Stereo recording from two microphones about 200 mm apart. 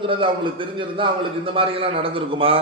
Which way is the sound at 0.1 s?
25° right (ahead or behind).